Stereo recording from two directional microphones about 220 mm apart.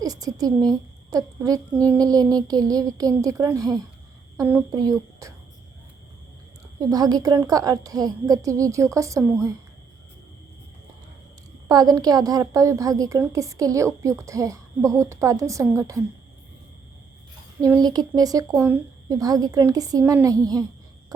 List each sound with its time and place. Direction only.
0.0 s a woman's voice: 15° right (ahead or behind)
6.7 s a woman's voice: 15° right (ahead or behind)
11.7 s a woman's voice: 15° right (ahead or behind)
17.6 s a woman's voice: 15° right (ahead or behind)
21.1 s a sound: 15° right (ahead or behind)